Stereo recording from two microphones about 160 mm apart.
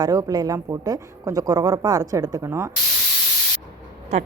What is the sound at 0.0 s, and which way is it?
Speech, 20° right (ahead or behind).